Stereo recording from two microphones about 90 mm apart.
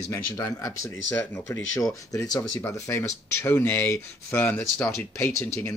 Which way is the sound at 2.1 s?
40° left (ahead or behind).